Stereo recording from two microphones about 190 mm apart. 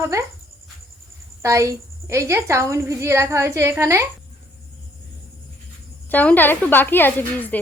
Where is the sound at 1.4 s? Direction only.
15° right (ahead or behind).